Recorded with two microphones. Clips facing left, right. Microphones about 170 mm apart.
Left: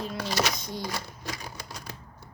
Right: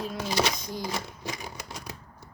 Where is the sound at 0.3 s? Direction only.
25° right (ahead or behind).